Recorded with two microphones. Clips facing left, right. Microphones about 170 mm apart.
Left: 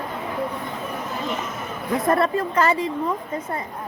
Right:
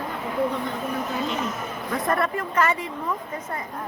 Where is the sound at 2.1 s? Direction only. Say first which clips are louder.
Left 4 dB; 30° left (ahead or behind).